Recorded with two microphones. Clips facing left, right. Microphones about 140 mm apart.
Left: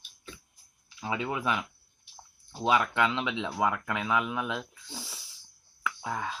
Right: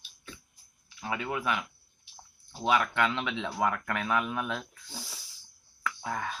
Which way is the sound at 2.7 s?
20° left (ahead or behind).